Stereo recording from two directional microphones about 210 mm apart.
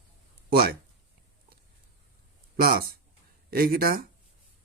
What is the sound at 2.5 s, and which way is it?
A man's voice, 45° right (ahead or behind).